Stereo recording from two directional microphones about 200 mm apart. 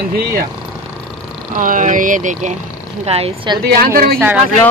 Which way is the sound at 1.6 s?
40° right (ahead or behind).